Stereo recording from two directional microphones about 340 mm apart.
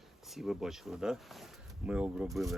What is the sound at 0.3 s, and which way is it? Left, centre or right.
Speech, centre.